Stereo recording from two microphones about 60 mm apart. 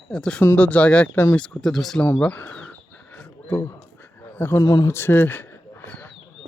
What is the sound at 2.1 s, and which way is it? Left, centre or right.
Speech, left.